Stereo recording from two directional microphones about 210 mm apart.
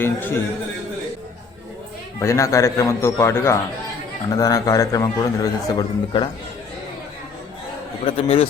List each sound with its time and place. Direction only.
0.0 s a man's voice: 10° left (ahead or behind)
2.1 s a man's voice: 15° left (ahead or behind)
8.0 s a man's voice: 30° left (ahead or behind)